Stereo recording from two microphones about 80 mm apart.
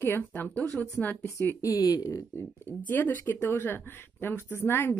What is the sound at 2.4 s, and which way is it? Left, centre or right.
Speech, left.